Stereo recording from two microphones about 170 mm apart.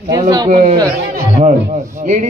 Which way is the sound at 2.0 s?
45° right (ahead or behind).